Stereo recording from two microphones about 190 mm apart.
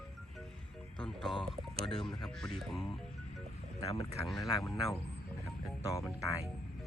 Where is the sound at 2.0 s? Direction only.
Centre (ahead or behind).